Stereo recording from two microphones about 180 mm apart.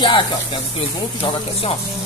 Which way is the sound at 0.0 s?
25° left (ahead or behind).